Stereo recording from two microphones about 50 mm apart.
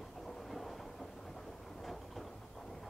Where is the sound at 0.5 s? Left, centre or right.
Centre.